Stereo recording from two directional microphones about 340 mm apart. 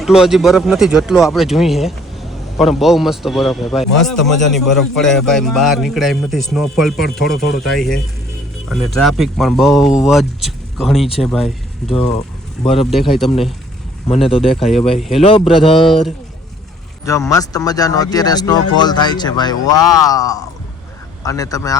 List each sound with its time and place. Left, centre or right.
0.0 s a man's voice: centre
12.6 s speech: centre
12.9 s a man's voice: centre
14.1 s speech: centre
14.5 s a man's voice: centre
15.2 s speech: centre
15.9 s a man's voice: centre